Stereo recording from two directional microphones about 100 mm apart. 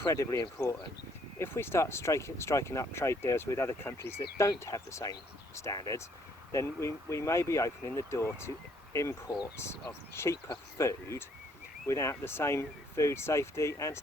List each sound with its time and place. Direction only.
0.0 s speech: 30° left (ahead or behind)